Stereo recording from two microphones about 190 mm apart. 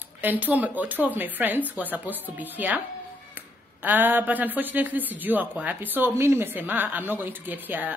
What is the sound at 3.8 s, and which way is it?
A woman's voice, 10° right (ahead or behind).